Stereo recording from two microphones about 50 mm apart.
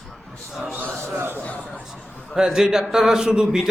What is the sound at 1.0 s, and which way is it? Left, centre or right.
Speech, right.